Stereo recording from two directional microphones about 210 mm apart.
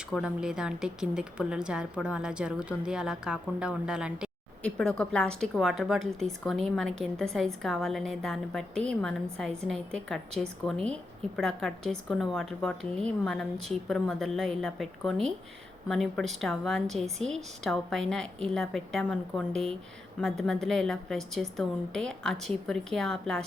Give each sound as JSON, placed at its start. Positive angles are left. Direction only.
{"t": 0.1, "sound": "a woman's voice", "side_deg": -5}